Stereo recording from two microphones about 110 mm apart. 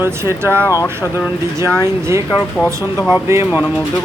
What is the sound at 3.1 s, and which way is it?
Speech, 25° right (ahead or behind).